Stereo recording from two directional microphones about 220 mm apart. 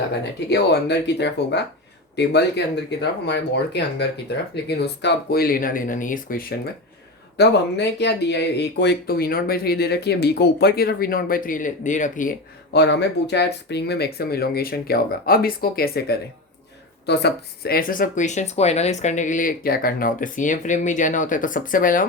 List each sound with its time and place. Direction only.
0.5 s speech: 50° left (ahead or behind)
7.3 s speech: 50° left (ahead or behind)
12.7 s speech: 50° left (ahead or behind)